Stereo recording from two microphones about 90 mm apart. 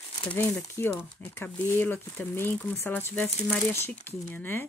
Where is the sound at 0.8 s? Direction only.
25° left (ahead or behind).